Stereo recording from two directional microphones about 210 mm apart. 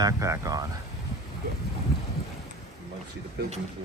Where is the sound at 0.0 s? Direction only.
15° right (ahead or behind).